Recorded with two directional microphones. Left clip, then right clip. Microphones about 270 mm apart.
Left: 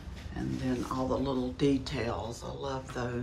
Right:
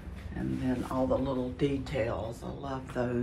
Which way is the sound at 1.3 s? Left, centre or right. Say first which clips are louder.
Left 2 dB; centre.